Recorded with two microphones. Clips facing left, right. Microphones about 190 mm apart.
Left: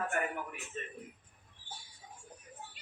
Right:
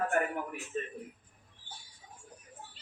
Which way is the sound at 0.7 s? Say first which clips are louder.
Right 7 dB; 50° right (ahead or behind).